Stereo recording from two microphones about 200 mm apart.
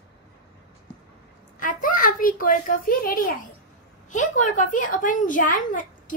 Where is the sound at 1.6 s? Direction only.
45° left (ahead or behind).